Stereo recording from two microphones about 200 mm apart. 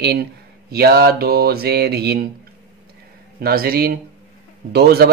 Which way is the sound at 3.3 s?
50° right (ahead or behind).